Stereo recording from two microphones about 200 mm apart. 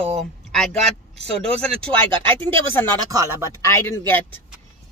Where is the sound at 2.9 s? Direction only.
20° right (ahead or behind).